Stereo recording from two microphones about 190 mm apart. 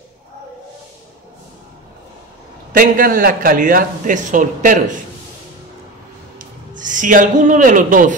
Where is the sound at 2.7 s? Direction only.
45° right (ahead or behind).